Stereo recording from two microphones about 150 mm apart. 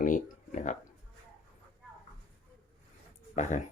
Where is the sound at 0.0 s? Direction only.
60° left (ahead or behind).